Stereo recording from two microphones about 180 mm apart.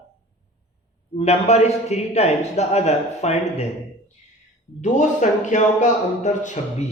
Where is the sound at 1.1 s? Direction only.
35° left (ahead or behind).